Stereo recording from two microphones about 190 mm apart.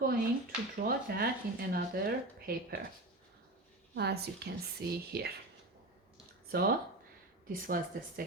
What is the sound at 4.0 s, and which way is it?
A woman's voice, 60° right (ahead or behind).